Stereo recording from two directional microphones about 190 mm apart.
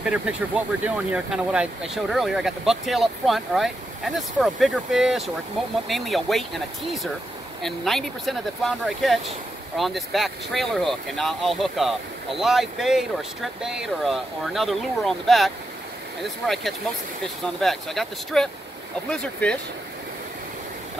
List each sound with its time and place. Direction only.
0.0 s speech: 5° right (ahead or behind)
17.6 s speech: centre (ahead or behind)